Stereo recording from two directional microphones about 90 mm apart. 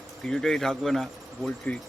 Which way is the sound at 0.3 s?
5° left (ahead or behind).